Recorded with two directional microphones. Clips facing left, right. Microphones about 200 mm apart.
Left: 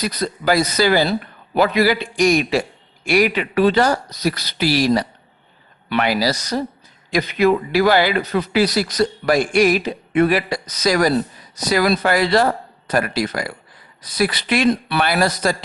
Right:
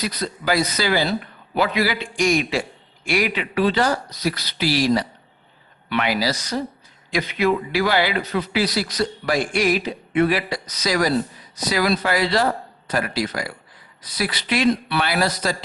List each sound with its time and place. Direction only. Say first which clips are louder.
0.0 s a man's voice: left 4 dB; 40° left (ahead or behind)